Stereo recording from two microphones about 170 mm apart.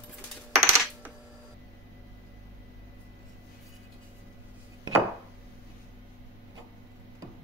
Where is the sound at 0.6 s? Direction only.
15° right (ahead or behind).